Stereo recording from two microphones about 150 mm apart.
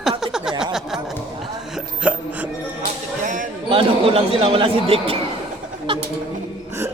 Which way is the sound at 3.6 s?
35° right (ahead or behind).